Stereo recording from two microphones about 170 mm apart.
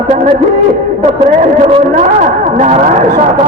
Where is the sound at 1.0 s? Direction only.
40° right (ahead or behind).